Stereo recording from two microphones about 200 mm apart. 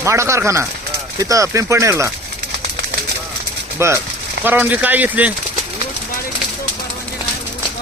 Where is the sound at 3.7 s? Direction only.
15° right (ahead or behind).